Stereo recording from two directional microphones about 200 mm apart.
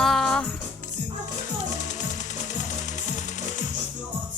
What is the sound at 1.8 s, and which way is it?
Music, 40° left (ahead or behind).